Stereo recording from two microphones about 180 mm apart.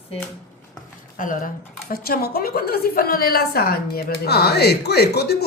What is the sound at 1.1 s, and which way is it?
A woman's voice, 45° left (ahead or behind).